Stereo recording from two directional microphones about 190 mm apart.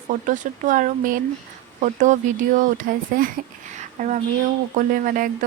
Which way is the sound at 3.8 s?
40° right (ahead or behind).